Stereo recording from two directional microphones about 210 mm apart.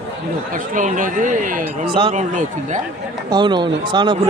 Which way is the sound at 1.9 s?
25° right (ahead or behind).